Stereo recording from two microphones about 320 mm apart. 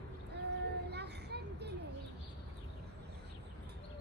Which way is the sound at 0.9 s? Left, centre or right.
Right.